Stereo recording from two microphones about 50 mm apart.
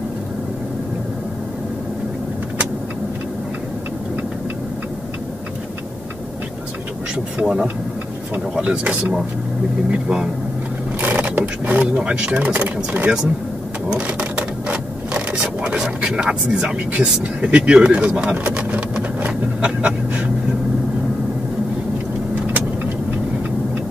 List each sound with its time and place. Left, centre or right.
7.3 s speech: centre
8.5 s speech: right
11.0 s a sound: right
11.9 s speech: right
14.0 s a sound: right
15.8 s speech: centre
19.6 s pant: right